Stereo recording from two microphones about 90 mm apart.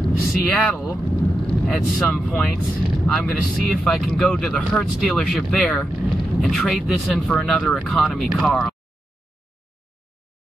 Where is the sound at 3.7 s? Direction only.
Centre (ahead or behind).